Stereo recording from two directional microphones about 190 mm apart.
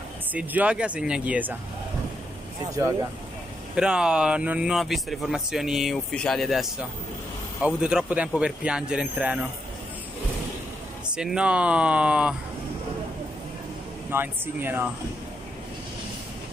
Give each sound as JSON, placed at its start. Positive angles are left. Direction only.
{"t": 0.3, "sound": "speech", "side_deg": -10}
{"t": 2.8, "sound": "speech", "side_deg": -15}
{"t": 3.7, "sound": "speech", "side_deg": -5}
{"t": 11.1, "sound": "speech", "side_deg": -5}
{"t": 14.1, "sound": "speech", "side_deg": -10}